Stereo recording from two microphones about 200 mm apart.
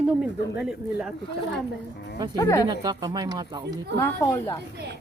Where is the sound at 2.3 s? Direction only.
20° left (ahead or behind).